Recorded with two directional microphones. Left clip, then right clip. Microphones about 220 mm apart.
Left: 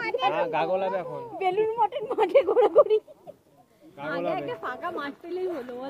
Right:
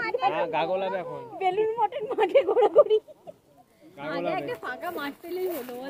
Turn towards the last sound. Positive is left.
turn(degrees=-5)  # may be behind; listen again after turning